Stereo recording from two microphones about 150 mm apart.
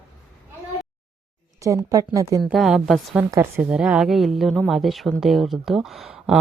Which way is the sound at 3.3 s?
20° right (ahead or behind).